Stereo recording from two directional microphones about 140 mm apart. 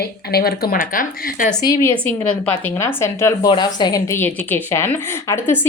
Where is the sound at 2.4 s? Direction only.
15° left (ahead or behind).